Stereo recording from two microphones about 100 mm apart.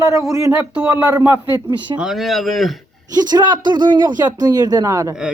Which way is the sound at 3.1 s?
45° right (ahead or behind).